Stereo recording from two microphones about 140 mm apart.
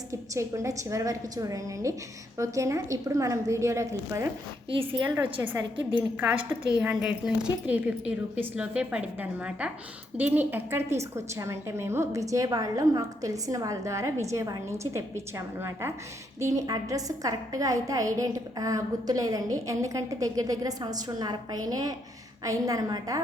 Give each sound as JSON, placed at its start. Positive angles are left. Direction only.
{"t": 0.1, "sound": "a woman's voice", "side_deg": -20}
{"t": 4.7, "sound": "a woman's voice", "side_deg": -40}
{"t": 5.0, "sound": "a woman's voice", "side_deg": -15}